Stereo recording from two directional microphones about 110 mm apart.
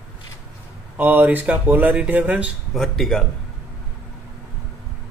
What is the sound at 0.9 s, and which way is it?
Speech, 15° right (ahead or behind).